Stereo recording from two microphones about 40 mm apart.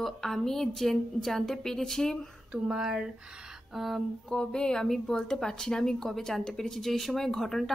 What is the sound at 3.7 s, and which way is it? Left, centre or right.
Speech, centre.